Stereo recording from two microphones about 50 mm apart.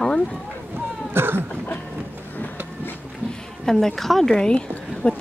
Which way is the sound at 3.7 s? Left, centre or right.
Centre.